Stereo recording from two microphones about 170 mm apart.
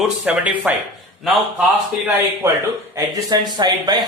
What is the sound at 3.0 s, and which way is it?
Speech, 25° right (ahead or behind).